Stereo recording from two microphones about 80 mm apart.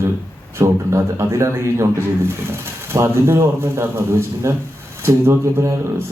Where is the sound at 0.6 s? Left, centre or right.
Right.